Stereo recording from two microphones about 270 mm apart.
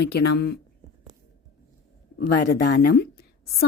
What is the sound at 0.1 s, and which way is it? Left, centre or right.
Speech, left.